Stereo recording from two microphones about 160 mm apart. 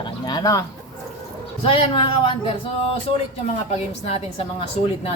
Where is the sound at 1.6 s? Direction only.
35° left (ahead or behind).